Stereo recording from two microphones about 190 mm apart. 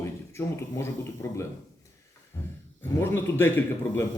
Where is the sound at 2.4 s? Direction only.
15° left (ahead or behind).